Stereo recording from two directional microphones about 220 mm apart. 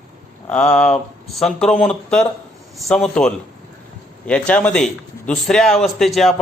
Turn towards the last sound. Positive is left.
turn(degrees=0)  # may be behind; listen again after turning